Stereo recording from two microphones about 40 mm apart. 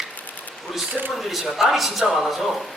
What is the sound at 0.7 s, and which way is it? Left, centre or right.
Speech, centre.